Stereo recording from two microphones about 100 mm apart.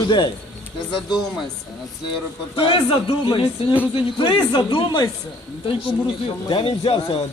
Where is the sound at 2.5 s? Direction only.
60° left (ahead or behind).